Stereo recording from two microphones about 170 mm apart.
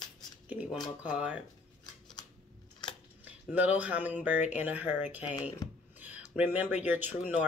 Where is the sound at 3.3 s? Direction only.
10° right (ahead or behind).